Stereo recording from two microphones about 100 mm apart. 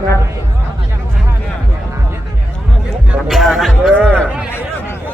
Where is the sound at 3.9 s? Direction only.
10° left (ahead or behind).